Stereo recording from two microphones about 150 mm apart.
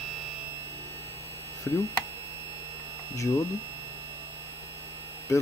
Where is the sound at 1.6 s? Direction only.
20° left (ahead or behind).